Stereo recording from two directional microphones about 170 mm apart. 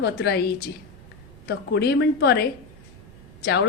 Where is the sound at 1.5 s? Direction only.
75° left (ahead or behind).